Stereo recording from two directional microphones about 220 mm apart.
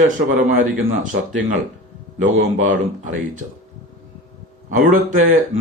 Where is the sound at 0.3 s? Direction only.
40° right (ahead or behind).